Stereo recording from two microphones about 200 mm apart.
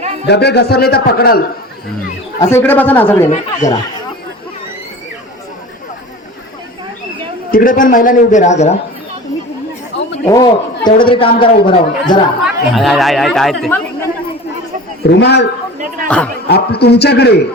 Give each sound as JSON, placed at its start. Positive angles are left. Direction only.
{"t": 0.3, "sound": "a man's voice", "side_deg": 55}
{"t": 2.4, "sound": "a man's voice", "side_deg": 10}
{"t": 7.5, "sound": "a man's voice", "side_deg": 45}
{"t": 9.9, "sound": "chatter", "side_deg": 65}
{"t": 10.2, "sound": "speech", "side_deg": 20}
{"t": 12.4, "sound": "speech", "side_deg": 0}
{"t": 15.0, "sound": "a man's voice", "side_deg": 60}
{"t": 16.0, "sound": "speech", "side_deg": 5}
{"t": 16.5, "sound": "a man's voice", "side_deg": 55}